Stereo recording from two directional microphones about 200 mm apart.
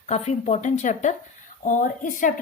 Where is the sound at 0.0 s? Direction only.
35° left (ahead or behind).